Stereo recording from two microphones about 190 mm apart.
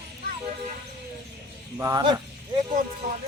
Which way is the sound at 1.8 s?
20° right (ahead or behind).